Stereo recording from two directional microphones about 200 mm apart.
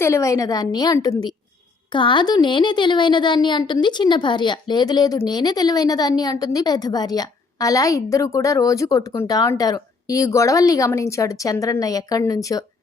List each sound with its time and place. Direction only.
0.0 s a woman's voice: 15° left (ahead or behind)